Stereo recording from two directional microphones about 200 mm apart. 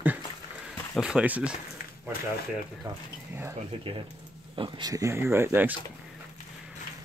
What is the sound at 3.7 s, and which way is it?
Speech, 30° right (ahead or behind).